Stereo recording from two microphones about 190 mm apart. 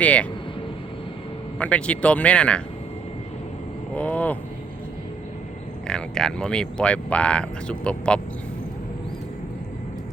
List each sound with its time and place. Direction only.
0.0 s vehicle: 5° left (ahead or behind)
1.5 s speech: 5° left (ahead or behind)
3.9 s a sound: 5° left (ahead or behind)
5.9 s speech: 5° left (ahead or behind)